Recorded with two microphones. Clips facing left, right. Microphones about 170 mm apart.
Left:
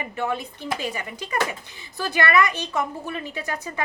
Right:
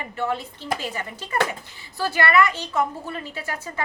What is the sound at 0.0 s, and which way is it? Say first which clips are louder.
A woman's voice: even; 15° left (ahead or behind).